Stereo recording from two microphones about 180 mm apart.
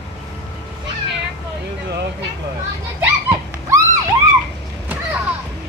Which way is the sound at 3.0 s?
15° right (ahead or behind).